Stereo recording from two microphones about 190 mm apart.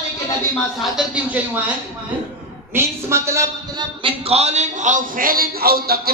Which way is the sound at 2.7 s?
15° right (ahead or behind).